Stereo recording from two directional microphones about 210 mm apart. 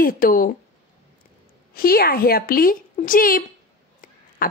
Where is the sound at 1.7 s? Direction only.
45° left (ahead or behind).